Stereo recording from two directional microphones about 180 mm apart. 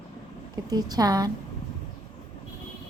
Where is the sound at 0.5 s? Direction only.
20° right (ahead or behind).